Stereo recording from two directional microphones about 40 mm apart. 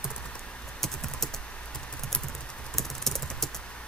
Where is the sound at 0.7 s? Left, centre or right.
Centre.